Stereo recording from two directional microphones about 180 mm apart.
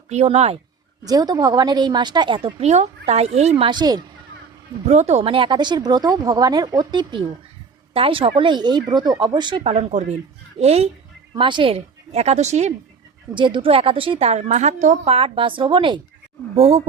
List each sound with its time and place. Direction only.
0.1 s a woman's voice: 35° right (ahead or behind)
1.0 s a woman's voice: 20° right (ahead or behind)
4.9 s a woman's voice: 40° right (ahead or behind)
13.3 s a woman's voice: 25° right (ahead or behind)